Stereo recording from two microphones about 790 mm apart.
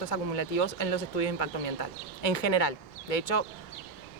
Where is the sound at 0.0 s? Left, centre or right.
Left.